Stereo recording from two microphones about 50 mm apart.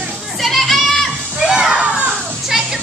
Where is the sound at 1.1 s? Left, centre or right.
Right.